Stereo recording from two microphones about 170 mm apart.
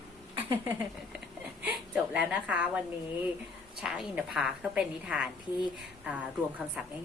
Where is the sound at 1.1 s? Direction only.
10° right (ahead or behind).